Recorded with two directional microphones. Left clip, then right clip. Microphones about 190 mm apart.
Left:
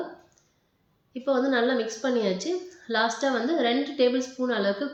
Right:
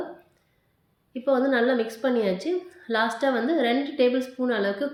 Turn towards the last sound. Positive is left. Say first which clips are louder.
# right 1 dB
turn(degrees=-45)  # may be behind; listen again after turning